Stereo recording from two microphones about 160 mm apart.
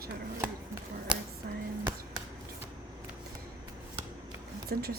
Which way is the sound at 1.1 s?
5° right (ahead or behind).